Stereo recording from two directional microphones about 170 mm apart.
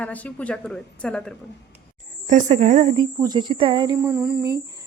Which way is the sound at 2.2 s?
45° right (ahead or behind).